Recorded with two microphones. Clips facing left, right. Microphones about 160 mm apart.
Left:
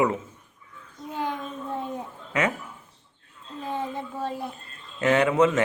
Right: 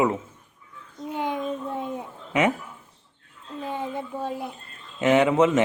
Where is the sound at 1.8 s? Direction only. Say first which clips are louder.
Right 1 dB; 15° right (ahead or behind).